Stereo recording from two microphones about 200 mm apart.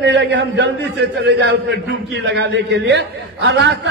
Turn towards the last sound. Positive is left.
turn(degrees=-55)  # may be behind; listen again after turning